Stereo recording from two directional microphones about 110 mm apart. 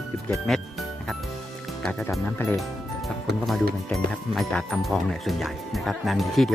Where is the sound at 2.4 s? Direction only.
20° left (ahead or behind).